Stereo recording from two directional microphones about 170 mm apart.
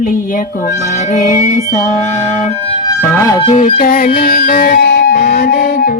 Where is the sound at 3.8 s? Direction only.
60° left (ahead or behind).